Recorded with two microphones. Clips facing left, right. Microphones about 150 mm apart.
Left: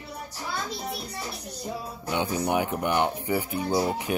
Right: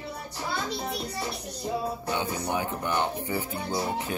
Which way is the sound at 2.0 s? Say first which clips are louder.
Left 3 dB; 15° left (ahead or behind).